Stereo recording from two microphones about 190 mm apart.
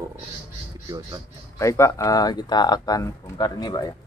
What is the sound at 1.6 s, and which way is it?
Speech, 15° left (ahead or behind).